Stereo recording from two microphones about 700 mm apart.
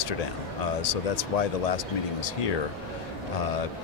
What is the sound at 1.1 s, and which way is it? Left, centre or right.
Speech, left.